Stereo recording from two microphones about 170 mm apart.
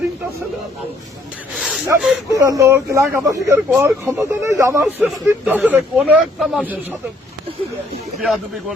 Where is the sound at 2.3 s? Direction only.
20° right (ahead or behind); by 6.7 s centre (ahead or behind).